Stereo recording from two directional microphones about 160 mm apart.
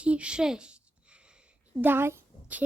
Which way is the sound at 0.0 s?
5° right (ahead or behind).